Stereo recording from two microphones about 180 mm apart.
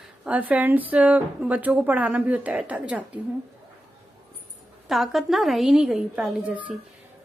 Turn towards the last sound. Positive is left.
turn(degrees=-5)  # may be behind; listen again after turning